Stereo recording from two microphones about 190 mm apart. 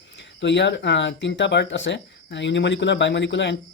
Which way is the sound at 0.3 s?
70° left (ahead or behind).